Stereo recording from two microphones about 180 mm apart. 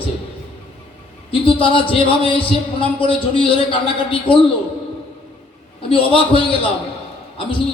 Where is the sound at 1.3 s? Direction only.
30° left (ahead or behind).